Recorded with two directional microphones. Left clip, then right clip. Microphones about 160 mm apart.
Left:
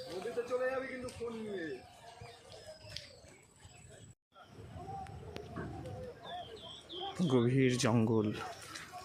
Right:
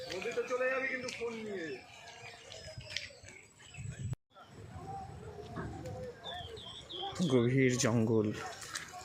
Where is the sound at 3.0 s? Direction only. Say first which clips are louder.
Right 8 dB; 60° left (ahead or behind).